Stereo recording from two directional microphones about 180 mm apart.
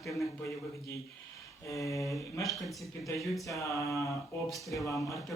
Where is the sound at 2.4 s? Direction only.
Centre (ahead or behind).